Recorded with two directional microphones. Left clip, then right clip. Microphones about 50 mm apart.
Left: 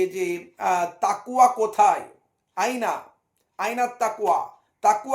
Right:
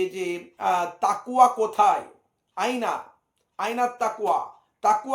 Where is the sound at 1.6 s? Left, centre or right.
Left.